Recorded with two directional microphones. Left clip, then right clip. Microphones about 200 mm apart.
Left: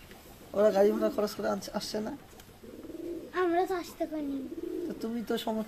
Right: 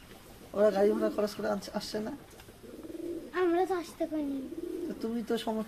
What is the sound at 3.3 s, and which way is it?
Bird, 10° right (ahead or behind).